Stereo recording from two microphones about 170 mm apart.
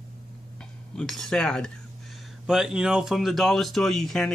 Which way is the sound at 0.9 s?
Centre (ahead or behind).